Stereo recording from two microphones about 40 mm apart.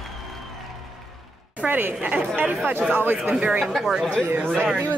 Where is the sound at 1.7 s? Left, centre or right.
Right.